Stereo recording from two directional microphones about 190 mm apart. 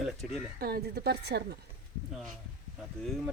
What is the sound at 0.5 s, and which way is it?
Speech, 55° right (ahead or behind).